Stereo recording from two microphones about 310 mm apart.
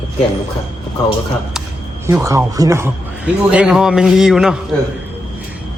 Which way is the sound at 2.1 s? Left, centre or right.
Centre.